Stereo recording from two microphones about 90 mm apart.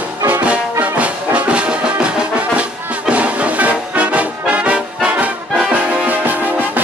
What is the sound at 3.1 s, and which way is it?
Music, 15° right (ahead or behind).